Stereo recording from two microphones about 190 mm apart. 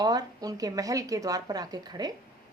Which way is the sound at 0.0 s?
20° right (ahead or behind).